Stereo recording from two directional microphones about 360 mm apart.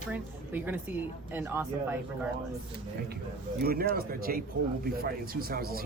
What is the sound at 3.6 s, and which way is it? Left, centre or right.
Speech, right.